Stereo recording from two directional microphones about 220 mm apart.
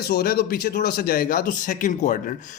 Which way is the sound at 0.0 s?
45° left (ahead or behind).